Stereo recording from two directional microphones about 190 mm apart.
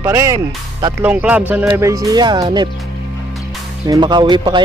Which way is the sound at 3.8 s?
20° right (ahead or behind).